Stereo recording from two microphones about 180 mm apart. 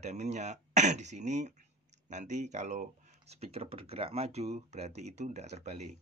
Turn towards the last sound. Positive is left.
turn(degrees=-40)  # may be behind; listen again after turning